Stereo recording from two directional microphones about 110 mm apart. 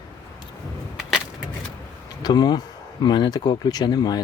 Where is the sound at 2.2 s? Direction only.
40° left (ahead or behind).